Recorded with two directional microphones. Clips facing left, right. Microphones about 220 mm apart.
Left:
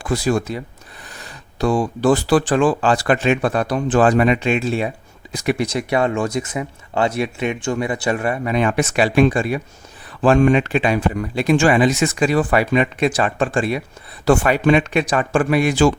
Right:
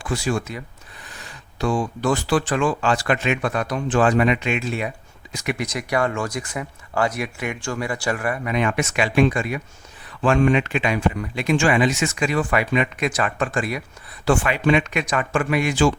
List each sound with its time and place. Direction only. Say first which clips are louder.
0.0 s speech: left 5 dB; 40° left (ahead or behind)
14.3 s speech: left 4 dB; 40° left (ahead or behind)